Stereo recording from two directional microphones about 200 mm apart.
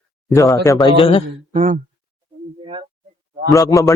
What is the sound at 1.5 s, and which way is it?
Speech, 35° right (ahead or behind).